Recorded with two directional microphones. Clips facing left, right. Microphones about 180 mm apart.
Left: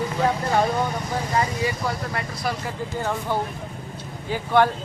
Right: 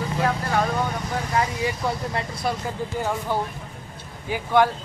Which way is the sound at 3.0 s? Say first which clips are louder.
Even; 10° right (ahead or behind).